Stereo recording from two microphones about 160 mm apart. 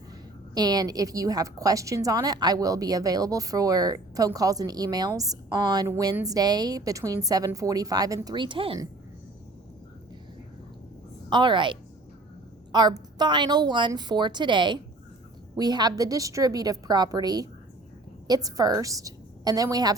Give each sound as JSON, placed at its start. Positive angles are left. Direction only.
{"t": 0.5, "sound": "a woman's voice", "side_deg": -25}
{"t": 11.3, "sound": "a woman's voice", "side_deg": -30}